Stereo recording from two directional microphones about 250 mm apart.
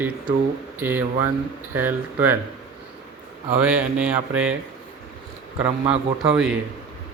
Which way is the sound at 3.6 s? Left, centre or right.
Centre.